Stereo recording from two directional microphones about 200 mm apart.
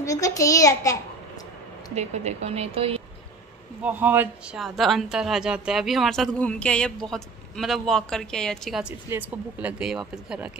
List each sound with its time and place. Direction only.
0.0 s a child's voice: 15° left (ahead or behind)
2.0 s speech: 35° right (ahead or behind)
3.8 s a woman's voice: 10° right (ahead or behind)